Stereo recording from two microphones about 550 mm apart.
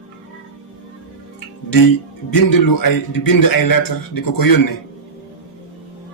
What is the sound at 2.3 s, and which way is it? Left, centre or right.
A man's voice, left.